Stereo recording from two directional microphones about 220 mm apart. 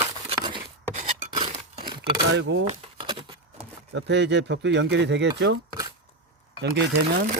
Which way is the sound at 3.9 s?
50° right (ahead or behind).